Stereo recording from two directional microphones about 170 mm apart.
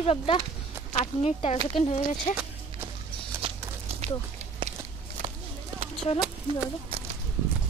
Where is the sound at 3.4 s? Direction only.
35° right (ahead or behind).